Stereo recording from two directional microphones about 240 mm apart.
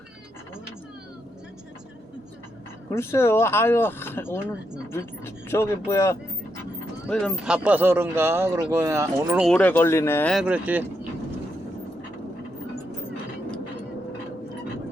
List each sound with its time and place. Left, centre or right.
2.9 s speech: centre
9.5 s speech: centre